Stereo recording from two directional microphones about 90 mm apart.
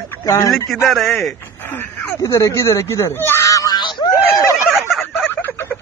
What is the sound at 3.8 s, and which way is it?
Snicker, 60° left (ahead or behind).